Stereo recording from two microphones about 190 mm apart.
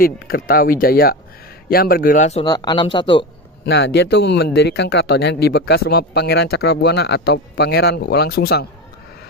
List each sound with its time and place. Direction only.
0.0 s speech: 50° left (ahead or behind)
2.4 s speech: 20° left (ahead or behind)
3.6 s speech: 65° left (ahead or behind)